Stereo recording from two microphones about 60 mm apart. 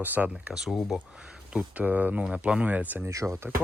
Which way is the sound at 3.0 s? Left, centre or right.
Right.